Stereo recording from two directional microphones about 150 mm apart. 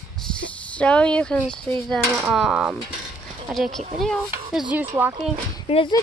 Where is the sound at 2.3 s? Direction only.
5° right (ahead or behind).